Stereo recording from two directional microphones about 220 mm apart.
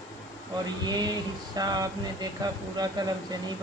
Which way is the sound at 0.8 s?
20° right (ahead or behind).